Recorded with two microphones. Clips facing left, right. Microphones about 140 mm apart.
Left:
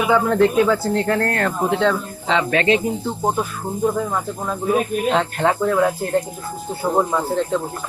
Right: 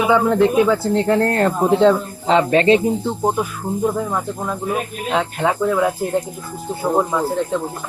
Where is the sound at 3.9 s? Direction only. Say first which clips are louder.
Left 1 dB; 5° right (ahead or behind).